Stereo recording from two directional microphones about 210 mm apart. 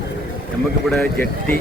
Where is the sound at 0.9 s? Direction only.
5° left (ahead or behind).